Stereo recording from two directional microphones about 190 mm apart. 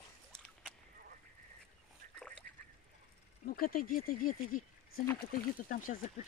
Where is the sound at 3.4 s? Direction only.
50° left (ahead or behind).